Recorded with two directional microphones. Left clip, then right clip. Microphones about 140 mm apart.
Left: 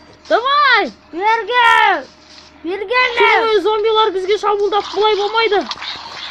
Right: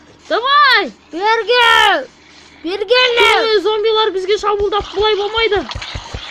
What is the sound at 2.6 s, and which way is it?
Speech, 70° right (ahead or behind).